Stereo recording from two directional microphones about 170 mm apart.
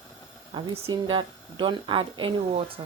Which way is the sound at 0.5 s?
35° right (ahead or behind).